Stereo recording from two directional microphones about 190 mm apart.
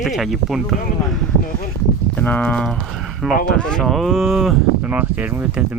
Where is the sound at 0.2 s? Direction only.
Centre (ahead or behind).